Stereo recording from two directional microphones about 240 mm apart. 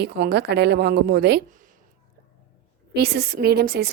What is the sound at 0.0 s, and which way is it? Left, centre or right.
A woman's voice, right.